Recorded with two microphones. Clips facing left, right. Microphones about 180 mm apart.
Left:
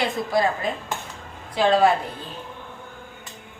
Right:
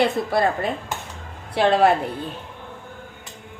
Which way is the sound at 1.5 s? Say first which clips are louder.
Right 1 dB; 65° right (ahead or behind).